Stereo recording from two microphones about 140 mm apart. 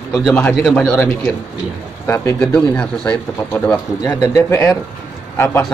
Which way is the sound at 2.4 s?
5° left (ahead or behind).